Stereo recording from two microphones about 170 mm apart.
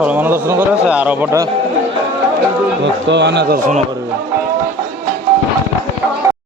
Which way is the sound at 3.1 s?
90° right.